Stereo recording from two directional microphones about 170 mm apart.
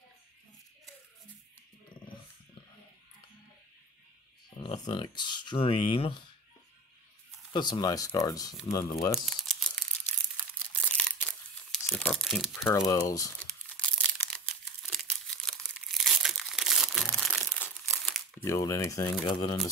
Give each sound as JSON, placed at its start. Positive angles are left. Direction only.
{"t": 4.6, "sound": "speech", "side_deg": 25}
{"t": 7.5, "sound": "speech", "side_deg": 25}
{"t": 9.2, "sound": "crumpling", "side_deg": 0}
{"t": 12.7, "sound": "speech", "side_deg": 20}
{"t": 13.7, "sound": "crumpling", "side_deg": 5}
{"t": 18.4, "sound": "speech", "side_deg": 15}